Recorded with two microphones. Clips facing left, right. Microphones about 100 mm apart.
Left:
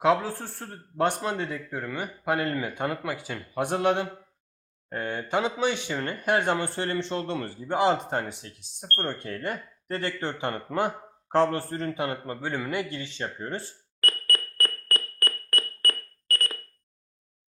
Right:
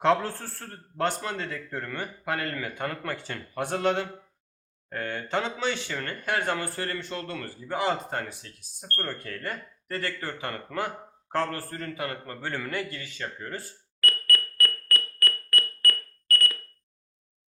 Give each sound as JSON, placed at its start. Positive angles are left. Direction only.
{"t": 0.0, "sound": "a man's voice", "side_deg": 5}